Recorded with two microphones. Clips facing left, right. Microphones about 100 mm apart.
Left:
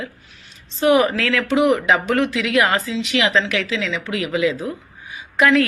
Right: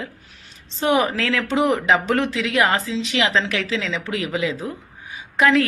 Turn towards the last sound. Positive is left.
turn(degrees=-25)  # may be behind; listen again after turning